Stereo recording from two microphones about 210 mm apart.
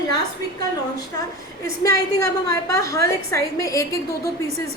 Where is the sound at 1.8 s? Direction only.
15° left (ahead or behind).